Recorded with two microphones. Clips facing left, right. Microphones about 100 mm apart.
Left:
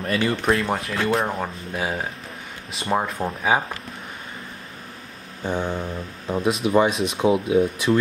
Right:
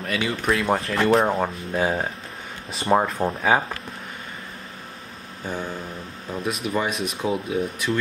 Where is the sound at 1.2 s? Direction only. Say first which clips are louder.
Right 4 dB; 20° right (ahead or behind).